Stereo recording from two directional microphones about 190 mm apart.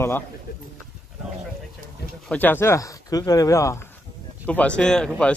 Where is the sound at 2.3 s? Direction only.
10° left (ahead or behind).